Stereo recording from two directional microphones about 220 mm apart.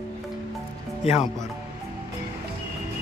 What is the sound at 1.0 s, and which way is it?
Speech, 25° left (ahead or behind).